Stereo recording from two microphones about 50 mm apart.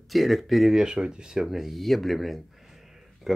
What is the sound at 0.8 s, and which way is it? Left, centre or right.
Speech, centre.